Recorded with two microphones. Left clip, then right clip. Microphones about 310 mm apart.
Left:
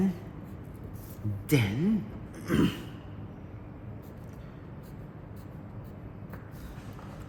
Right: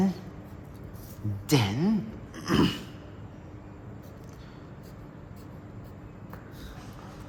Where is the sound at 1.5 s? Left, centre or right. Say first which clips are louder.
Right 2 dB; centre.